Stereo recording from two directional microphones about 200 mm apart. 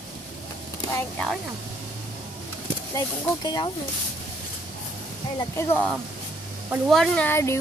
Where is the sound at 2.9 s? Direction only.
20° left (ahead or behind).